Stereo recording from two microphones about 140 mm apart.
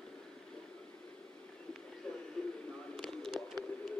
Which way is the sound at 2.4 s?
5° left (ahead or behind).